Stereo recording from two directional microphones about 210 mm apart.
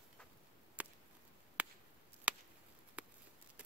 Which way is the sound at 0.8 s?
5° right (ahead or behind).